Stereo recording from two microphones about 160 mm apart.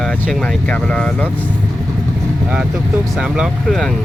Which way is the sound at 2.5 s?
5° right (ahead or behind).